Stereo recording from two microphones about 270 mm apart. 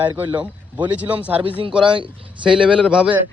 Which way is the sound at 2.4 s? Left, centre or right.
Centre.